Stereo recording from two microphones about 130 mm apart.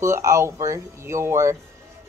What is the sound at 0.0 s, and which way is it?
Speech, 25° right (ahead or behind).